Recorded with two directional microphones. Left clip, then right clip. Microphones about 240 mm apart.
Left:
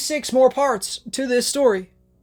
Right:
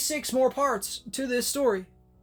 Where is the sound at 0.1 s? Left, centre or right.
Left.